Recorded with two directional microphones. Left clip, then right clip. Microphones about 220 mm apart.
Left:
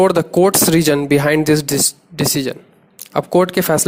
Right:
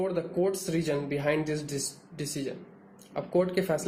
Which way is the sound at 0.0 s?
45° left (ahead or behind).